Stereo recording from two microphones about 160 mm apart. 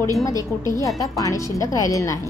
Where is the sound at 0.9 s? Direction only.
20° left (ahead or behind).